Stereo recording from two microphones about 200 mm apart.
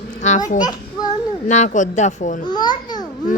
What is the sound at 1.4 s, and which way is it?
A child's voice, 35° left (ahead or behind).